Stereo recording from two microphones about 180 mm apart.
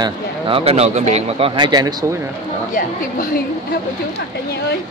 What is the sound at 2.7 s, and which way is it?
A woman's voice, 50° left (ahead or behind).